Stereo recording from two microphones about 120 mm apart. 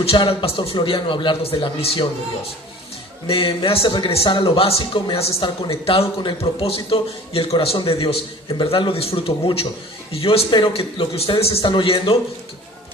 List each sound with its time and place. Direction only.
0.0 s speech: 50° left (ahead or behind)
3.2 s speech: 45° left (ahead or behind)
11.6 s speech: 45° left (ahead or behind)